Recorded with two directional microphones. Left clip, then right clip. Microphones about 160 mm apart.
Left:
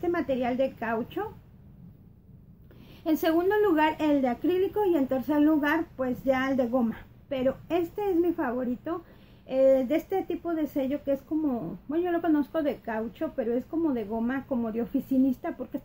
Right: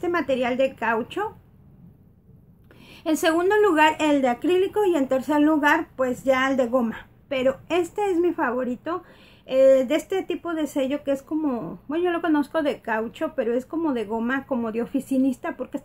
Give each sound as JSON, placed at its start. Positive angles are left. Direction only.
{"t": 0.0, "sound": "speech", "side_deg": -15}
{"t": 3.0, "sound": "speech", "side_deg": -10}